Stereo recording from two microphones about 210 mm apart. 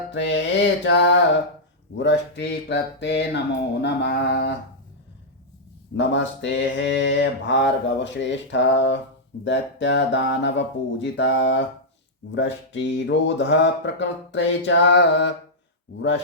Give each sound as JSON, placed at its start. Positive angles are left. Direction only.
{"t": 0.1, "sound": "speech", "side_deg": 55}
{"t": 3.8, "sound": "a sound", "side_deg": 55}
{"t": 6.0, "sound": "speech", "side_deg": 55}